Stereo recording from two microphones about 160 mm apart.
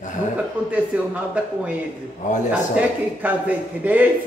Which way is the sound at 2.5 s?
10° right (ahead or behind).